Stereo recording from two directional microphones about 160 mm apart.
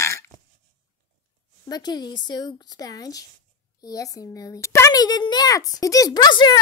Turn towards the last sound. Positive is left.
turn(degrees=30)  # may be behind; listen again after turning